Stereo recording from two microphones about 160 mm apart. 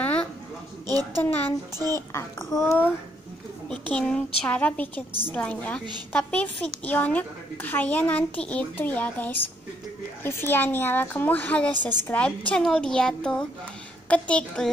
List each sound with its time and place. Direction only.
0.0 s a sound: 10° left (ahead or behind)
1.2 s a woman's voice: 10° left (ahead or behind)
1.8 s a woman's voice: 20° right (ahead or behind)
2.1 s a woman's voice: 15° left (ahead or behind)